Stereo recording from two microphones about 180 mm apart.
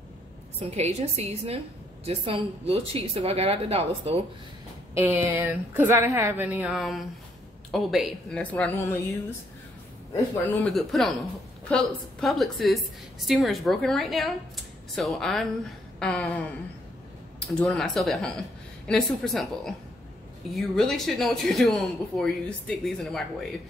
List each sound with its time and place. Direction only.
0.6 s a woman's voice: 35° right (ahead or behind)
4.9 s a woman's voice: 10° right (ahead or behind); by 9.0 s 15° left (ahead or behind)
10.1 s speech: 10° left (ahead or behind)
17.4 s speech: 5° left (ahead or behind)